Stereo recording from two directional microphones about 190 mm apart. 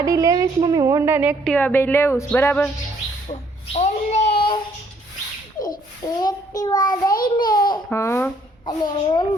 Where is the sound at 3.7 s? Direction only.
35° left (ahead or behind).